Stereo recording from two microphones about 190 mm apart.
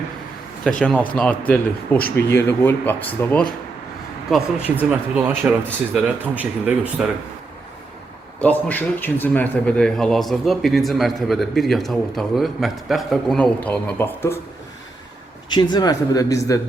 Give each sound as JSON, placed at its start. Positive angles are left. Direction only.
{"t": 0.8, "sound": "speech", "side_deg": 5}
{"t": 4.3, "sound": "speech", "side_deg": 0}
{"t": 8.4, "sound": "speech", "side_deg": 10}
{"t": 15.4, "sound": "speech", "side_deg": 25}